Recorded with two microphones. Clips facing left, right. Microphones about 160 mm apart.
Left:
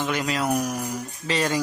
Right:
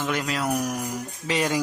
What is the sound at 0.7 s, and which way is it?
Speech, 10° right (ahead or behind).